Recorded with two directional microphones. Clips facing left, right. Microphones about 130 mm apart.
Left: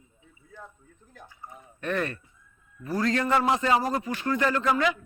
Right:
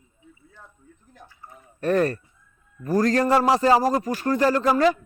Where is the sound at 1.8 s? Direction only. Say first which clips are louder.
Right 8 dB; 40° right (ahead or behind).